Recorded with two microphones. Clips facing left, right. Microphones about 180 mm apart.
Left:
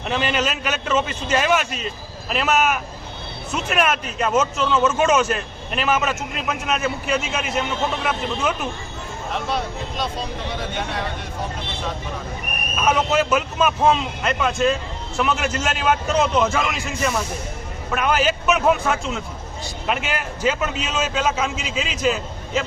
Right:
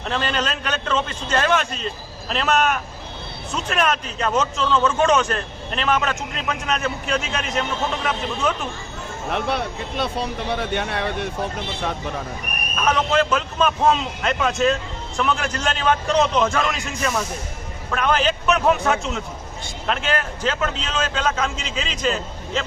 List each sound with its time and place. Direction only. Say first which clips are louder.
0.0 s a man's voice: left 2 dB; 5° left (ahead or behind)
9.3 s speech: right 2 dB; 60° right (ahead or behind)
12.7 s a man's voice: even; 10° left (ahead or behind)